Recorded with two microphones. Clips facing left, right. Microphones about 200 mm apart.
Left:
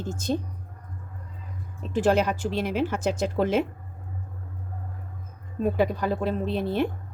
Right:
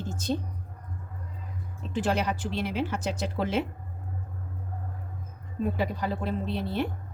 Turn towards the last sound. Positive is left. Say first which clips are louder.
# left 4 dB
turn(degrees=50)  # may be behind; listen again after turning